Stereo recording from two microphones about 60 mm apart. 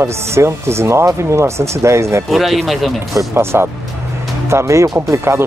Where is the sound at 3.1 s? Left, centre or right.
Right.